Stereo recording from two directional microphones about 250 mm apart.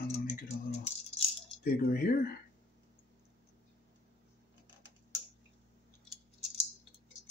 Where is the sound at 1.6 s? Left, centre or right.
Left.